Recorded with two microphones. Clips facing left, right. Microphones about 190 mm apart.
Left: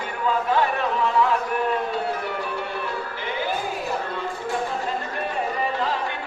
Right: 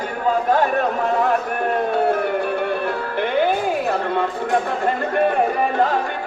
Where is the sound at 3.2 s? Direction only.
60° right (ahead or behind).